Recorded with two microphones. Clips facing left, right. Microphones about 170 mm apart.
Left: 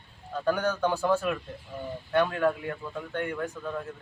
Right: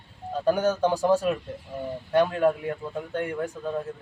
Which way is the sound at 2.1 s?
20° right (ahead or behind).